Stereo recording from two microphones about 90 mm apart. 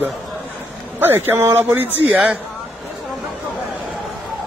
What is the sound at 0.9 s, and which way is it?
Speech, 25° right (ahead or behind).